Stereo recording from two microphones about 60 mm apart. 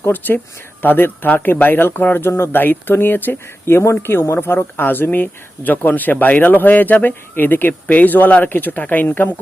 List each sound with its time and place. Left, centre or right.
0.0 s speech: left
3.8 s speech: left